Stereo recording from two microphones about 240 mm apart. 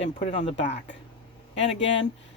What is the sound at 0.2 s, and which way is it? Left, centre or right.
Speech, left.